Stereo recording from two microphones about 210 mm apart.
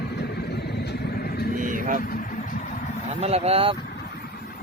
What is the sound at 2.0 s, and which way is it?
Vehicle, 40° left (ahead or behind).